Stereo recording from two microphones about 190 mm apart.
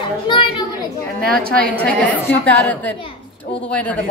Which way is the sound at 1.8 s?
10° left (ahead or behind).